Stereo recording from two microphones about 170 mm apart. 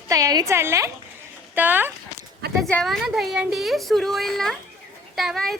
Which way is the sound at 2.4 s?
70° right (ahead or behind).